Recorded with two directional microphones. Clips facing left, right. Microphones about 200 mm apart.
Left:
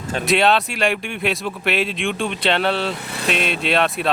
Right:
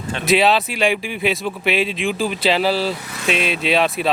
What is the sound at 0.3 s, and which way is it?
Speech, centre (ahead or behind).